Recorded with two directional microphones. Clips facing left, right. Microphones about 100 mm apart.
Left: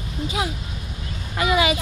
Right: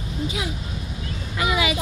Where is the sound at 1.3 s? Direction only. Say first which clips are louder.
Left 3 dB; 45° left (ahead or behind).